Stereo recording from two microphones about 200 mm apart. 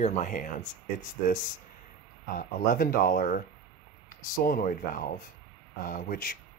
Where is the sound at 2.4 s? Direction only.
45° left (ahead or behind).